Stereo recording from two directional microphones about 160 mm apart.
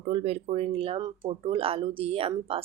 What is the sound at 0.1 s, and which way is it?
Speech, 40° right (ahead or behind).